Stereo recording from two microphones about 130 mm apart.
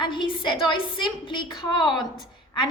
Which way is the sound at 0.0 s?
40° left (ahead or behind).